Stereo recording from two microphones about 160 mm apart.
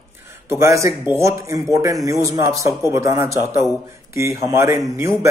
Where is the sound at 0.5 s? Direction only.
20° right (ahead or behind).